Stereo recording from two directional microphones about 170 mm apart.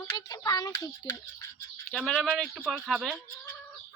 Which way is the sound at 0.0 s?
20° left (ahead or behind).